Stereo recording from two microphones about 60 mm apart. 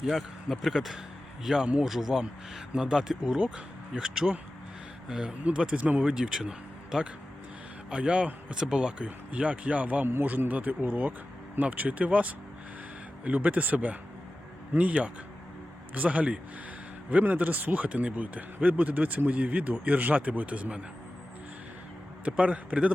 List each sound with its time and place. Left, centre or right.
0.0 s speech: centre
1.5 s a man's voice: centre
10.1 s a man's voice: right
22.2 s a man's voice: right